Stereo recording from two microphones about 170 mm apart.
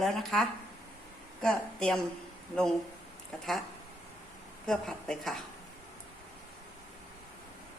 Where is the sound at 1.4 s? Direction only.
5° left (ahead or behind).